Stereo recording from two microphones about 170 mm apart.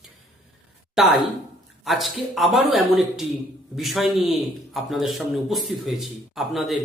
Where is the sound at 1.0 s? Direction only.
5° right (ahead or behind).